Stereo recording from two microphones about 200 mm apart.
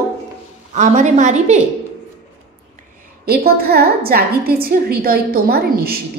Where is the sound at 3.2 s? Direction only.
50° right (ahead or behind).